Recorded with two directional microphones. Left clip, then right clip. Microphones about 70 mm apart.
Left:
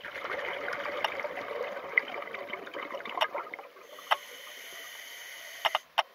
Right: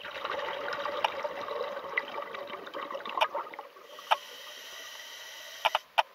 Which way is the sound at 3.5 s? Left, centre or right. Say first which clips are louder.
Even; right.